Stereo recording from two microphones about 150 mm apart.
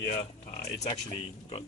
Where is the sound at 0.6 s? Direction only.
45° left (ahead or behind).